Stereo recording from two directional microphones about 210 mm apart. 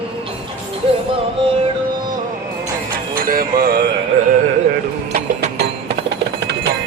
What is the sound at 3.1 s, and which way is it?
Music, 45° right (ahead or behind).